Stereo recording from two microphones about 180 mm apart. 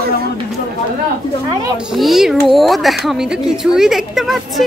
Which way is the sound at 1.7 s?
Centre (ahead or behind).